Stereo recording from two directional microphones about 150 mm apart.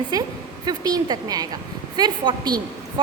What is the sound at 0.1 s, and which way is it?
A woman's voice, 25° right (ahead or behind).